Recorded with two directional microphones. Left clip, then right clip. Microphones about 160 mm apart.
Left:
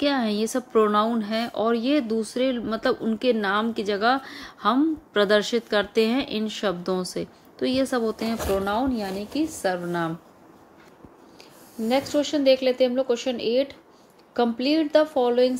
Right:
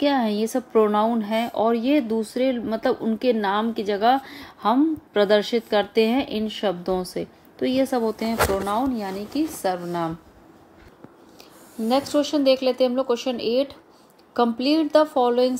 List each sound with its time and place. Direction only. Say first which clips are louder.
0.0 s speech: right 2 dB; 5° right (ahead or behind)
11.8 s a woman's voice: right 2 dB; 15° right (ahead or behind)